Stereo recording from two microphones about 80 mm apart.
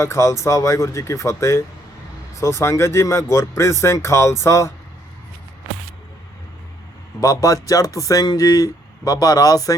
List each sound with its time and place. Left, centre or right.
0.0 s speech: left
7.2 s speech: left